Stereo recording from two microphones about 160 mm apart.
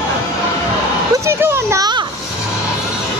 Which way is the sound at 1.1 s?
15° right (ahead or behind).